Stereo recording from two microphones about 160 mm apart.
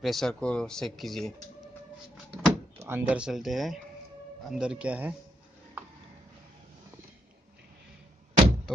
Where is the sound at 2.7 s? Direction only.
15° right (ahead or behind).